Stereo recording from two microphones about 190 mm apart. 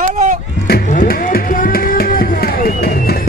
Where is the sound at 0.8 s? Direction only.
45° left (ahead or behind).